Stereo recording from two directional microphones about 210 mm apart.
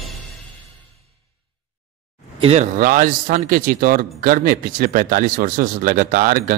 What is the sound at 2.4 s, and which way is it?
Speech, 30° right (ahead or behind).